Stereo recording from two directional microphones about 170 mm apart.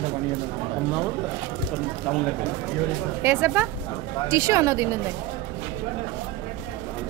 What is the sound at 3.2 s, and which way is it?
Speech, 15° right (ahead or behind).